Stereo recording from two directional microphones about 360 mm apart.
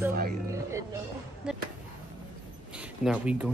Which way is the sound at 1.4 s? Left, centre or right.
Centre.